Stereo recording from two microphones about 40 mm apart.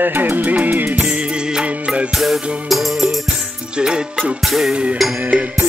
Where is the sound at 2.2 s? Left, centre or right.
Centre.